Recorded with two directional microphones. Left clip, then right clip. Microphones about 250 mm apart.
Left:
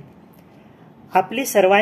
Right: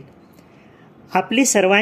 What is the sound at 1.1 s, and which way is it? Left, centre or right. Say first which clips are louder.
Speech: even; right.